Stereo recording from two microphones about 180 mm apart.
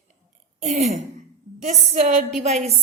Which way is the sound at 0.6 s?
45° right (ahead or behind).